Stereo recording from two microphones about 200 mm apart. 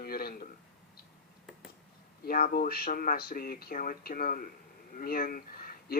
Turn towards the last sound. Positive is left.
turn(degrees=45)  # may be behind; listen again after turning